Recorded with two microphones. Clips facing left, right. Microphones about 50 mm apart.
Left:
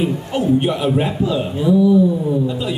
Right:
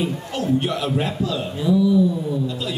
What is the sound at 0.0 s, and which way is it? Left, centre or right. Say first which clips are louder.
A man's voice: left 5 dB; left.